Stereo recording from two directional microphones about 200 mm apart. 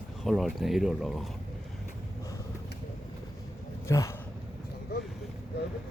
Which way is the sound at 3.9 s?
15° left (ahead or behind).